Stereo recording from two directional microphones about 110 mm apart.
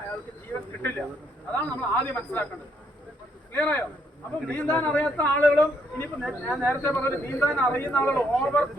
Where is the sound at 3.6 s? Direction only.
15° left (ahead or behind).